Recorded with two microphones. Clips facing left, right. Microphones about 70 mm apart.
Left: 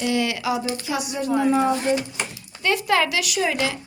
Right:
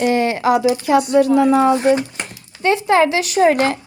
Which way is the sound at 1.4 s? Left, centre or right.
Right.